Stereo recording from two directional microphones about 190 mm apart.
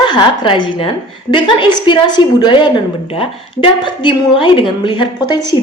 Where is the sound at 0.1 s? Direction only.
25° left (ahead or behind).